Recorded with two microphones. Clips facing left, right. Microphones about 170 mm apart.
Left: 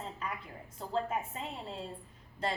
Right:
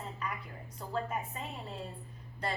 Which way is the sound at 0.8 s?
25° left (ahead or behind).